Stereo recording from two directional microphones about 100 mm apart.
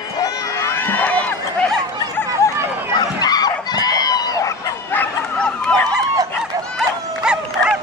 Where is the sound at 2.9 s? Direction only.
40° left (ahead or behind).